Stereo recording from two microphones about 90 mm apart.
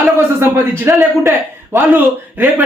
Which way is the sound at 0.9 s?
25° right (ahead or behind).